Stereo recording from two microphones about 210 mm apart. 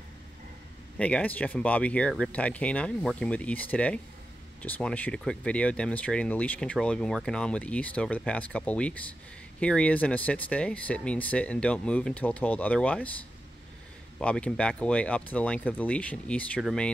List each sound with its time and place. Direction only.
0.9 s speech: 5° left (ahead or behind)
14.1 s speech: 5° left (ahead or behind)